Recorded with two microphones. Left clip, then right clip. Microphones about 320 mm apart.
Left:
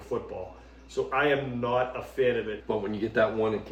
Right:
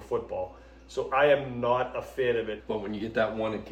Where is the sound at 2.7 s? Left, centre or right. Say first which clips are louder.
Left 3 dB; centre.